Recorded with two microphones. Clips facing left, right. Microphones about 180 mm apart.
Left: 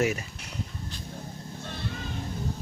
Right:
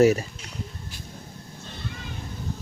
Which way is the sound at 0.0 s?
35° right (ahead or behind).